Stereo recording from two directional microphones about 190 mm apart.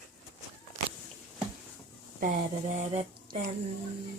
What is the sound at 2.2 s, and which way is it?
Speech, 40° right (ahead or behind).